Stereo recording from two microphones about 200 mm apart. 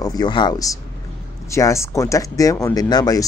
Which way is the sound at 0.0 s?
20° left (ahead or behind).